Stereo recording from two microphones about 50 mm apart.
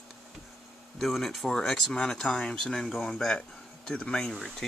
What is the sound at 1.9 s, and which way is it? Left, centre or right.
Speech, left.